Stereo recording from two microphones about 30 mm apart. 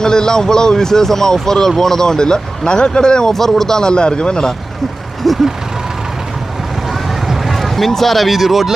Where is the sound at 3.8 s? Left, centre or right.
Left.